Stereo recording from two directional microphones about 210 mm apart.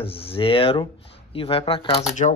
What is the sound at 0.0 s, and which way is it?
Speech, 25° left (ahead or behind).